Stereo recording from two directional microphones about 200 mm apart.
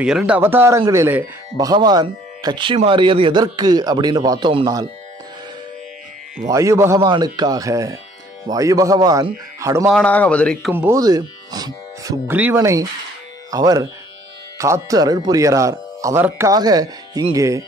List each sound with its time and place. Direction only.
0.0 s speech: 5° right (ahead or behind); by 4.8 s 20° right (ahead or behind)
6.4 s speech: 15° right (ahead or behind)
9.8 s a man's voice: 5° left (ahead or behind)
10.7 s speech: 10° right (ahead or behind)